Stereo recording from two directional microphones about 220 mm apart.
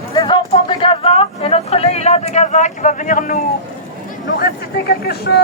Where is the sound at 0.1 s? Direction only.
20° left (ahead or behind); by 3.4 s 35° left (ahead or behind).